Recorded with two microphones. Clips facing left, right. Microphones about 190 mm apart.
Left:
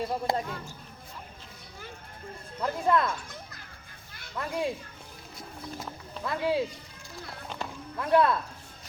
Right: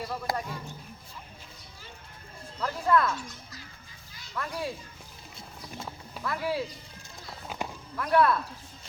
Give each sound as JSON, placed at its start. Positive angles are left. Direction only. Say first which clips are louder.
{"t": 0.1, "sound": "speech", "louder": "left 3 dB", "side_deg": 25}
{"t": 2.6, "sound": "speech", "louder": "even", "side_deg": 20}
{"t": 4.4, "sound": "speech", "louder": "left 3 dB", "side_deg": 20}
{"t": 6.2, "sound": "speech", "louder": "left 3 dB", "side_deg": 20}
{"t": 7.5, "sound": "music", "louder": "right 2 dB", "side_deg": -5}
{"t": 7.9, "sound": "speech", "louder": "even", "side_deg": 20}